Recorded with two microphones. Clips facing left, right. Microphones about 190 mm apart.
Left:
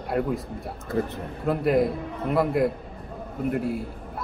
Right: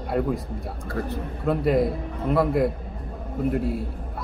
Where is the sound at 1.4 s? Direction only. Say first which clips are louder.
Even; centre (ahead or behind).